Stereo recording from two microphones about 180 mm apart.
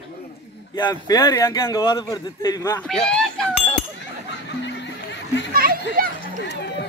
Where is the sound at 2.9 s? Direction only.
5° left (ahead or behind).